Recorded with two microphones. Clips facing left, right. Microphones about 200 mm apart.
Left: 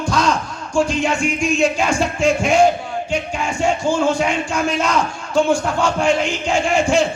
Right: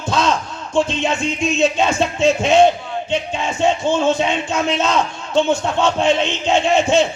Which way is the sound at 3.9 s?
20° right (ahead or behind).